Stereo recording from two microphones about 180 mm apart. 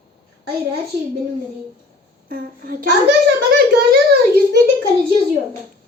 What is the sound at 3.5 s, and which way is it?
A child's voice, 60° right (ahead or behind).